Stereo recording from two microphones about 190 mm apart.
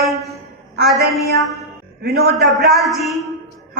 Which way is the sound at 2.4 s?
Centre (ahead or behind).